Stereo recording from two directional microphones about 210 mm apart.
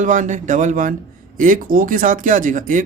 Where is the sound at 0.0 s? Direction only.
35° right (ahead or behind).